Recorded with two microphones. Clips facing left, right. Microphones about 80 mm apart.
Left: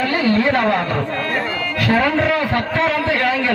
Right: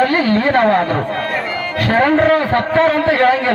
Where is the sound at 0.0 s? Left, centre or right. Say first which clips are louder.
Right 3 dB; right.